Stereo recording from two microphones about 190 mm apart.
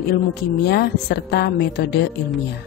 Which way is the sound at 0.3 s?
60° left (ahead or behind).